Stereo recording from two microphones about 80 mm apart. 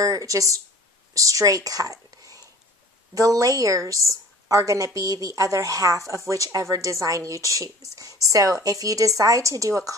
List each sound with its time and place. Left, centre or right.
0.0 s a woman's voice: right